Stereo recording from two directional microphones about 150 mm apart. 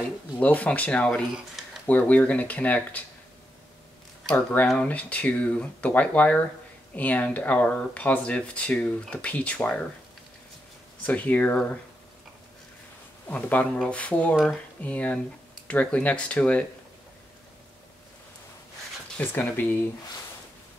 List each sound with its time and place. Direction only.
0.4 s speech: 10° left (ahead or behind)
4.3 s speech: 5° left (ahead or behind)
11.1 s speech: 10° left (ahead or behind)
13.3 s speech: 10° left (ahead or behind)
19.1 s speech: 15° left (ahead or behind)